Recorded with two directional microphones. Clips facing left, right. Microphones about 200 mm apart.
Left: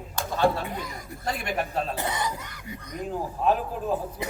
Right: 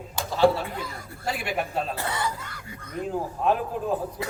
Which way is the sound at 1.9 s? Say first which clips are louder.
Even; 20° left (ahead or behind).